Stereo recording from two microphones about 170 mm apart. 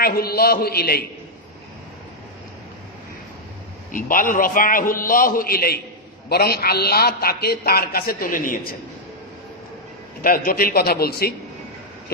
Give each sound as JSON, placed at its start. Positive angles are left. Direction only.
{"t": 0.0, "sound": "a man's voice", "side_deg": 65}
{"t": 3.9, "sound": "a man's voice", "side_deg": 55}
{"t": 10.2, "sound": "a man's voice", "side_deg": 60}